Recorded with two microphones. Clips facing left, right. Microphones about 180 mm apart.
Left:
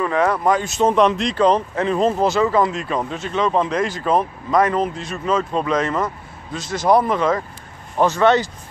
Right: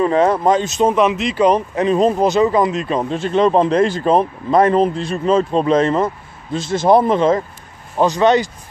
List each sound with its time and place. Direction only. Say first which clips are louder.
0.0 s speech: right 4 dB; 25° right (ahead or behind)
0.8 s speech: even; 5° right (ahead or behind); by 7.4 s 25° right (ahead or behind)
8.0 s speech: right 2 dB; 15° right (ahead or behind)